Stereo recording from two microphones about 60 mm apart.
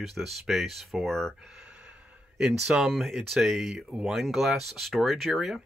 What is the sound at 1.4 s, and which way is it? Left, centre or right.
Gasp, centre.